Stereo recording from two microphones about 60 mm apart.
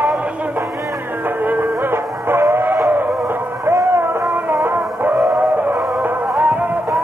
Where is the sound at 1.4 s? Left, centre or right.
Right.